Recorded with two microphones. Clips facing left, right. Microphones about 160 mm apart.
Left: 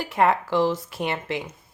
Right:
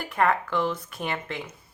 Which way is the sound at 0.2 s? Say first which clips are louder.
Left 4 dB; 30° left (ahead or behind).